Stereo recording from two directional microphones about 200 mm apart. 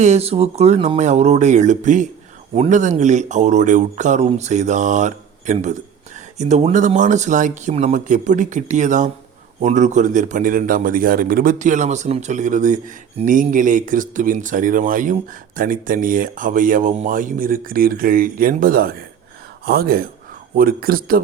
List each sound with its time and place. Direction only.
0.0 s a man's voice: 30° right (ahead or behind)